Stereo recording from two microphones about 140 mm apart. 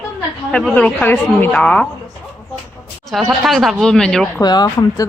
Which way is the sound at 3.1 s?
Centre (ahead or behind).